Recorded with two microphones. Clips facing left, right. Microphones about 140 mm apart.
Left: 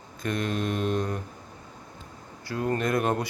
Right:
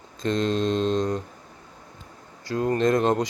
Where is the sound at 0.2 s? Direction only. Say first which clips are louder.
Right 5 dB; 25° right (ahead or behind).